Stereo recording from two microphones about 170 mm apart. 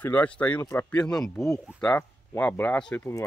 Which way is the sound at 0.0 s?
10° left (ahead or behind).